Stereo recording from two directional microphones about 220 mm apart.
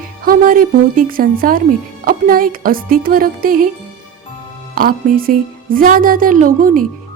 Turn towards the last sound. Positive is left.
turn(degrees=-40)  # may be behind; listen again after turning